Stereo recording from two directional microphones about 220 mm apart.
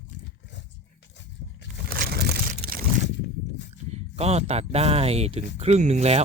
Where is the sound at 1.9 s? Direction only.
45° right (ahead or behind).